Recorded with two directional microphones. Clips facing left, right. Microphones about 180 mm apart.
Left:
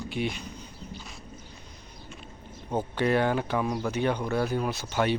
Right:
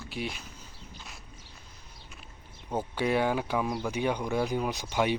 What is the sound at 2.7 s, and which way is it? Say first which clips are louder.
Speech: left 3 dB; 10° right (ahead or behind).